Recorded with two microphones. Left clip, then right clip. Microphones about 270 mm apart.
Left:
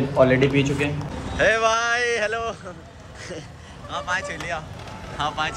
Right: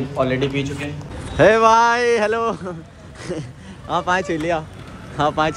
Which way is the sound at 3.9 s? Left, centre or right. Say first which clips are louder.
Right 7 dB; centre.